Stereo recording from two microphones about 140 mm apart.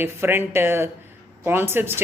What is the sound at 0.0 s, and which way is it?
Speech, 15° right (ahead or behind).